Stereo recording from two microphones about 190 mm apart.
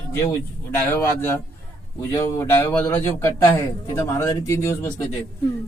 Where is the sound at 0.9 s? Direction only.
10° left (ahead or behind).